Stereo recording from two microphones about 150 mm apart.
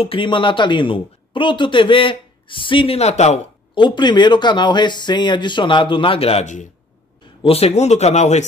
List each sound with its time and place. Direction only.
0.0 s speech: 35° left (ahead or behind)
3.7 s speech: 30° left (ahead or behind); by 6.7 s 55° left (ahead or behind)
7.4 s speech: 40° left (ahead or behind)